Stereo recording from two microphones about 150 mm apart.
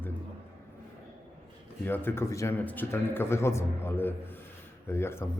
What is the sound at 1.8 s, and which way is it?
Speech, 15° left (ahead or behind).